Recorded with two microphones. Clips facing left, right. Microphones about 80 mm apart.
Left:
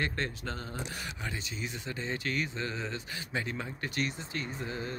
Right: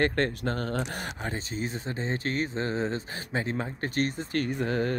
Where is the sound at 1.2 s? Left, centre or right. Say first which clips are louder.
Right 6 dB; right.